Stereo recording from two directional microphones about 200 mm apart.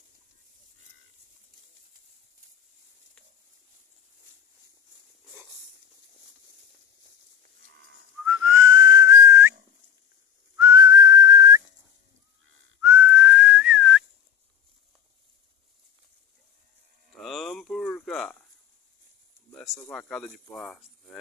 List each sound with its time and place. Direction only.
7.6 s livestock: 60° right (ahead or behind)
8.3 s whistling: 15° right (ahead or behind)
10.6 s whistling: 20° right (ahead or behind)
12.8 s whistling: 15° right (ahead or behind)
17.1 s cattle: centre (ahead or behind)
19.9 s speech: 5° left (ahead or behind)